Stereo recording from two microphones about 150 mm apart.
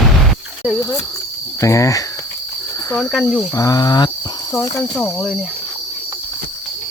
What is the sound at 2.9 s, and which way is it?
Speech, 5° left (ahead or behind).